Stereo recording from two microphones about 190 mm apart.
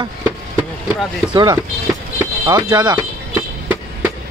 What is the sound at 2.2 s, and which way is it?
Speech, 15° right (ahead or behind).